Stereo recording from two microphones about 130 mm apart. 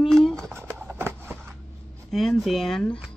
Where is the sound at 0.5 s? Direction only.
20° right (ahead or behind).